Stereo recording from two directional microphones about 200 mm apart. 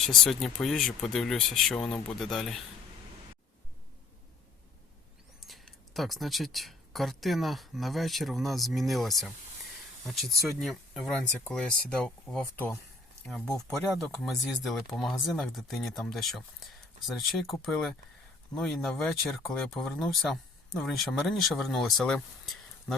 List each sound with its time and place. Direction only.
0.2 s speech: centre (ahead or behind)
5.5 s speech: centre (ahead or behind)